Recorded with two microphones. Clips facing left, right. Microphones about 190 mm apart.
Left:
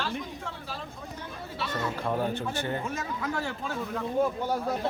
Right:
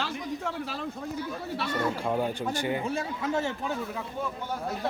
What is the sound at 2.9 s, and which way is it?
Speech, 30° right (ahead or behind).